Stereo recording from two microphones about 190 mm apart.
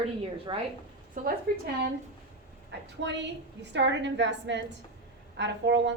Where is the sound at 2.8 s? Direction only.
70° right (ahead or behind).